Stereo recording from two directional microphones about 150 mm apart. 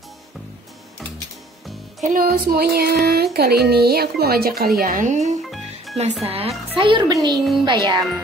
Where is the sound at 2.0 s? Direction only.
70° right (ahead or behind); by 5.3 s 55° right (ahead or behind).